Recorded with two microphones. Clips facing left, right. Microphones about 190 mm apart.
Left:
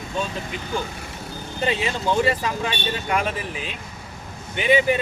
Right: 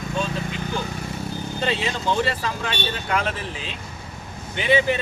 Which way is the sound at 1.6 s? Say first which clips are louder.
Left 2 dB; 15° left (ahead or behind).